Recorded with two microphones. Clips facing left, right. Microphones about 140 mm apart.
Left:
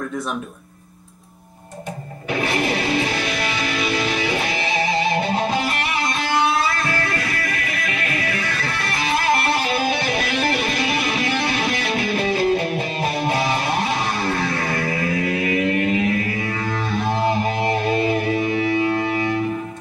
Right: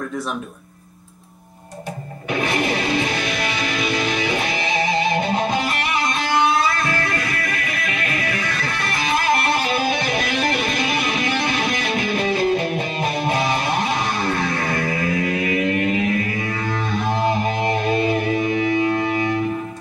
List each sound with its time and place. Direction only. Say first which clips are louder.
2.8 s music: even; 30° left (ahead or behind)
6.8 s music: right 1 dB; 35° left (ahead or behind)
7.7 s music: even; 30° right (ahead or behind)
8.1 s music: even; 30° left (ahead or behind)